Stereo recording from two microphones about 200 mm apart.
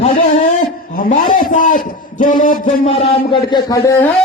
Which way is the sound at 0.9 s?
45° left (ahead or behind).